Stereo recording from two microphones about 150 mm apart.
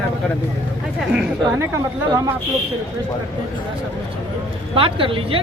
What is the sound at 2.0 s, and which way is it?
Speech, 20° right (ahead or behind).